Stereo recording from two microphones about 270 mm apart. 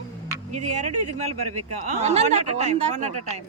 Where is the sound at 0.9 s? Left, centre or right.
Right.